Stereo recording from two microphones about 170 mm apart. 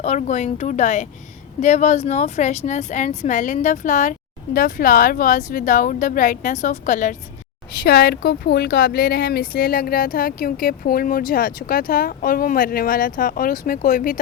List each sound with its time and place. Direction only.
0.0 s a woman's voice: 40° left (ahead or behind)
7.9 s speech: 65° left (ahead or behind)